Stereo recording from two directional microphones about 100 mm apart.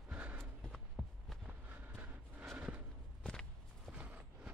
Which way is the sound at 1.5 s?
20° right (ahead or behind).